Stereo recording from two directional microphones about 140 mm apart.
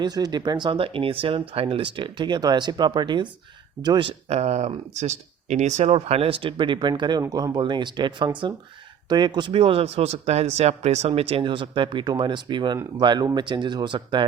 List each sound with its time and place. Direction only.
0.0 s speech: 30° right (ahead or behind)
4.3 s speech: 50° right (ahead or behind); by 14.3 s 35° right (ahead or behind)